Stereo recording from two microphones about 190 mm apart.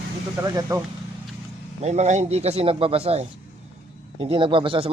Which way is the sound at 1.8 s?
35° right (ahead or behind).